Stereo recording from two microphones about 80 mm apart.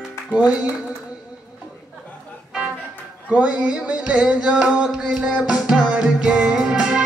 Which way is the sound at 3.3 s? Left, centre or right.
Centre.